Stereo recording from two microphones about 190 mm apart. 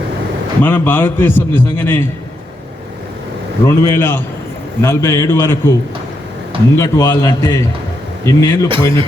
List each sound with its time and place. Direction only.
0.6 s a man's voice: 10° left (ahead or behind)
3.8 s a man's voice: 10° left (ahead or behind)
6.7 s a man's voice: 15° left (ahead or behind)
8.7 s a man's voice: 25° right (ahead or behind)